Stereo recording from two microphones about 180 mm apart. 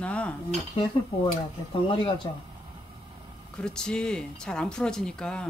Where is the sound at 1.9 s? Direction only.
30° left (ahead or behind).